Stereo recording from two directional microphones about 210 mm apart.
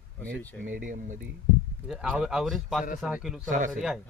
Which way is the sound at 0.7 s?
40° right (ahead or behind).